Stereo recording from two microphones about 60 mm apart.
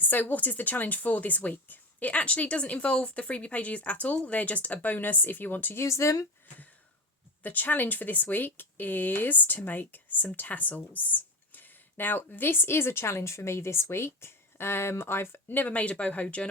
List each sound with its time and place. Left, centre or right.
0.0 s speech: left
5.7 s speech: left
7.4 s speech: left